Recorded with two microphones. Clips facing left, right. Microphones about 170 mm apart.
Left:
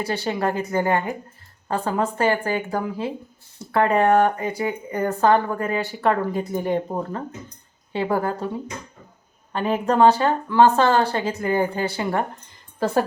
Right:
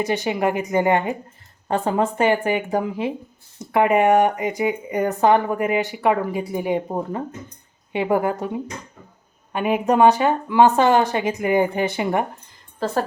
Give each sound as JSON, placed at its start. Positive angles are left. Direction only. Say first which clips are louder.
{"t": 0.0, "sound": "speech", "louder": "right 3 dB", "side_deg": -20}
{"t": 12.8, "sound": "a woman's voice", "louder": "left 2 dB", "side_deg": 10}